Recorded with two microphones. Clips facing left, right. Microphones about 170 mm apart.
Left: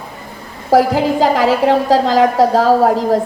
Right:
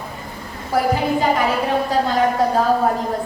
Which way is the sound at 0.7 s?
90° left.